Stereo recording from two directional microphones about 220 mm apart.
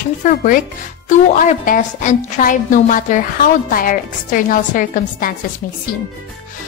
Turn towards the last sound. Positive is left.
turn(degrees=40)  # may be behind; listen again after turning